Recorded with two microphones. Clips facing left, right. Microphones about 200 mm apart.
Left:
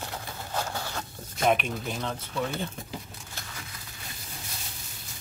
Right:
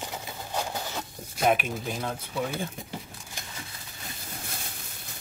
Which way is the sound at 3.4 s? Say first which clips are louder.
Right 1 dB; 15° right (ahead or behind).